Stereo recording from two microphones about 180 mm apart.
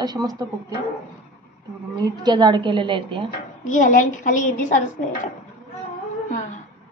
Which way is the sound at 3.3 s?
45° left (ahead or behind).